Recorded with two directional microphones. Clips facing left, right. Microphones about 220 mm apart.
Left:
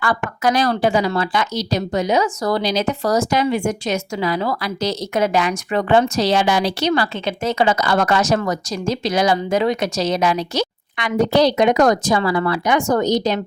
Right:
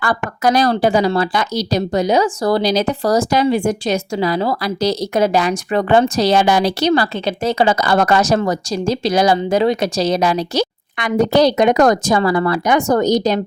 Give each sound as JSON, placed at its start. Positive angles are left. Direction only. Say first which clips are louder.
{"t": 0.0, "sound": "a woman's voice", "louder": "right 2 dB", "side_deg": -40}
{"t": 10.9, "sound": "a woman's voice", "louder": "right 2 dB", "side_deg": -45}